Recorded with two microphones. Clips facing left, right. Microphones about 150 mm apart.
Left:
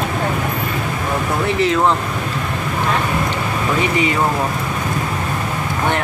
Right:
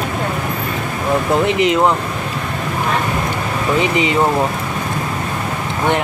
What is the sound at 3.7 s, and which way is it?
Speech, 20° right (ahead or behind).